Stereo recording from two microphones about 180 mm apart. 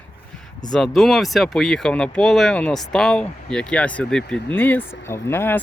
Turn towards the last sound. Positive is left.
turn(degrees=10)  # may be behind; listen again after turning